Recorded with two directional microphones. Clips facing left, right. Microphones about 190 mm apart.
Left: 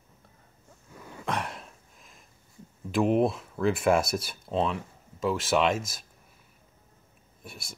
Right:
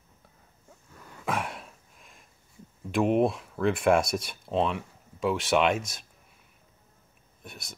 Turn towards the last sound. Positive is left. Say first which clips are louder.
# even
turn(degrees=5)  # may be behind; listen again after turning